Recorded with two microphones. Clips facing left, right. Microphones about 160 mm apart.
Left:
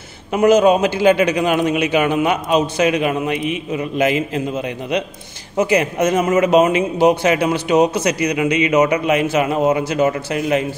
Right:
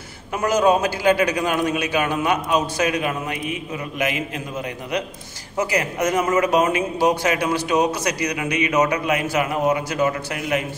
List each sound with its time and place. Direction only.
0.3 s speech: 20° left (ahead or behind)